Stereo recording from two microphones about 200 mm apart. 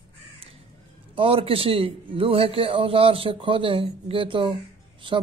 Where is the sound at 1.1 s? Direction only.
25° right (ahead or behind).